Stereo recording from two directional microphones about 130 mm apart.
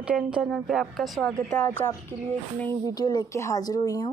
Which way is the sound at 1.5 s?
10° left (ahead or behind).